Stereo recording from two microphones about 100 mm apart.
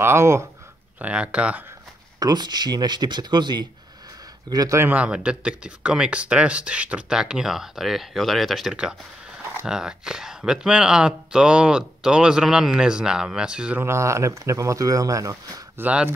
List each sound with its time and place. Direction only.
0.0 s speech: 25° right (ahead or behind)
0.9 s speech: 15° right (ahead or behind)
2.1 s speech: 40° right (ahead or behind)
4.7 s speech: 20° right (ahead or behind)
13.7 s speech: 30° right (ahead or behind)
15.8 s speech: 15° right (ahead or behind)